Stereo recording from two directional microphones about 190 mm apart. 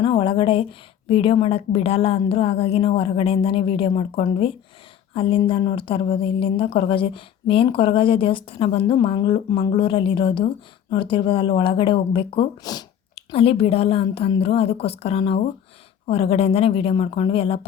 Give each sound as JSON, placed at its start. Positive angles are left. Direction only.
{"t": 0.0, "sound": "a woman's voice", "side_deg": 25}